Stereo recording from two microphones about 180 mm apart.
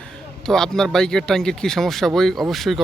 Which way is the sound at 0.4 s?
5° left (ahead or behind).